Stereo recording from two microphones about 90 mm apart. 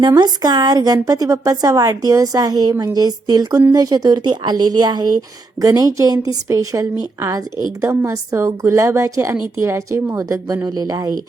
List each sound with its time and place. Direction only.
0.2 s a woman's voice: 50° right (ahead or behind)